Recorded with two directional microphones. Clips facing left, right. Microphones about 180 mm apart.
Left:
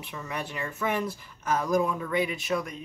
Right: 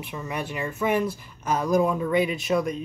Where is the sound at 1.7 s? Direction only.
25° right (ahead or behind).